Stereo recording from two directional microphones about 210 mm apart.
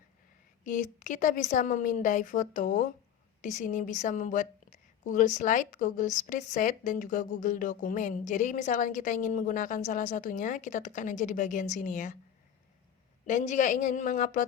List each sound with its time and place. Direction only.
0.6 s a woman's voice: 35° left (ahead or behind)
13.2 s a woman's voice: 35° left (ahead or behind)